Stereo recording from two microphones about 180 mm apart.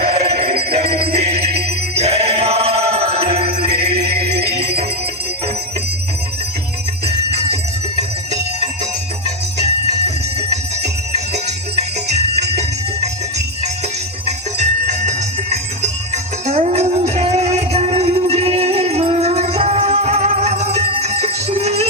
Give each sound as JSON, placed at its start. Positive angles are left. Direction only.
{"t": 0.0, "sound": "music", "side_deg": -40}
{"t": 7.5, "sound": "music", "side_deg": -40}
{"t": 14.3, "sound": "music", "side_deg": -40}